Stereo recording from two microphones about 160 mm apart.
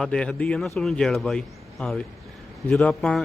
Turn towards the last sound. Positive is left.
turn(degrees=5)  # may be behind; listen again after turning